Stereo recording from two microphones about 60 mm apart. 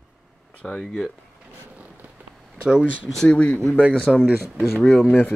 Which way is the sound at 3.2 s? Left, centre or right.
Centre.